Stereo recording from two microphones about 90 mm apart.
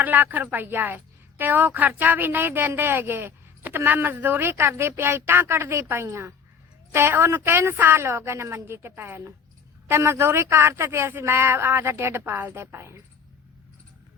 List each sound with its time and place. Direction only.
0.0 s a woman's voice: 20° right (ahead or behind)